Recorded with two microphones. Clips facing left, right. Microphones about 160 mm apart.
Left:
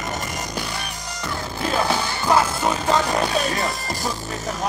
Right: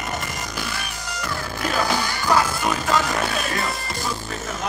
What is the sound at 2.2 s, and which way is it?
Music, 25° left (ahead or behind).